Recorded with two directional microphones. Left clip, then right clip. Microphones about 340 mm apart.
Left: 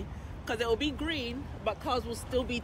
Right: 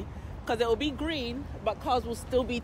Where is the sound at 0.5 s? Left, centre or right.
Centre.